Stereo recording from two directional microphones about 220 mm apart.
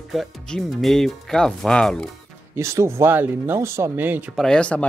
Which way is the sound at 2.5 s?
15° right (ahead or behind).